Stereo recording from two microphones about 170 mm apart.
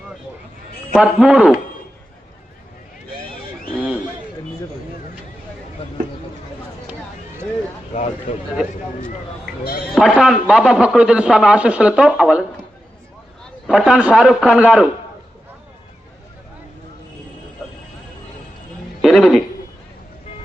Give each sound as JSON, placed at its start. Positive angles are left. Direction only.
{"t": 0.9, "sound": "a man's voice", "side_deg": -5}
{"t": 7.9, "sound": "a man's voice", "side_deg": 40}
{"t": 9.9, "sound": "a man's voice", "side_deg": 0}
{"t": 13.7, "sound": "a man's voice", "side_deg": -5}
{"t": 19.0, "sound": "a woman's voice", "side_deg": 0}